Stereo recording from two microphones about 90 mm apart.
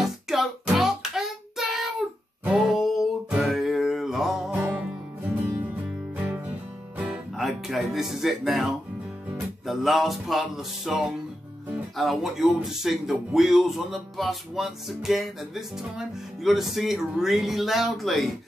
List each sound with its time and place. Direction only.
0.3 s music: 5° right (ahead or behind)
4.5 s music: 20° right (ahead or behind)
6.1 s music: 20° right (ahead or behind)
7.1 s music: centre (ahead or behind)
9.7 s a man's voice: centre (ahead or behind)